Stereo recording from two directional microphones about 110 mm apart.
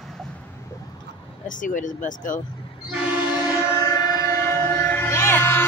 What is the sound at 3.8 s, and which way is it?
Civil defense siren, 30° left (ahead or behind).